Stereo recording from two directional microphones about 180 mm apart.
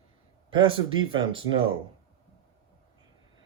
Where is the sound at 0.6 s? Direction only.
30° right (ahead or behind).